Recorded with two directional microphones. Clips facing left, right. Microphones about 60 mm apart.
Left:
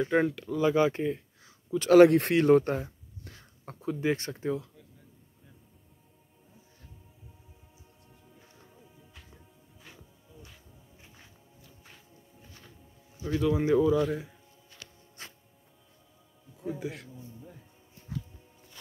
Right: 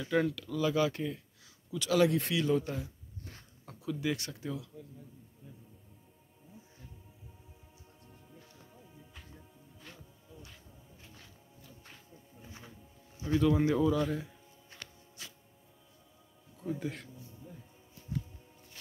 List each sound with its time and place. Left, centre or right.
0.0 s speech: left
1.7 s speech: left
8.7 s music: centre
11.6 s music: centre
12.4 s music: centre
13.4 s speech: centre
14.8 s music: right
15.2 s music: left
16.5 s speech: centre
18.1 s music: left